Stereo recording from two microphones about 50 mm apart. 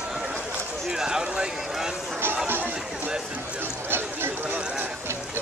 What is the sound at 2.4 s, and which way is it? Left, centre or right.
Chatter, right.